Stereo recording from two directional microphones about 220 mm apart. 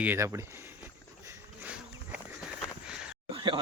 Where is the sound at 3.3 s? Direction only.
25° right (ahead or behind).